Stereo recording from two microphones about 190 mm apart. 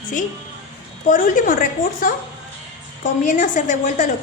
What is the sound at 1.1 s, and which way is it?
A woman's voice, 45° left (ahead or behind).